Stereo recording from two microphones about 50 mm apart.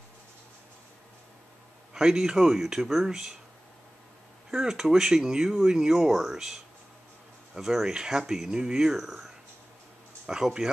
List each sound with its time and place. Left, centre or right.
2.0 s speech: centre
4.5 s speech: centre